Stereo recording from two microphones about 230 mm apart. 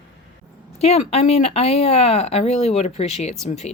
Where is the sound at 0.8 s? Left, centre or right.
Left.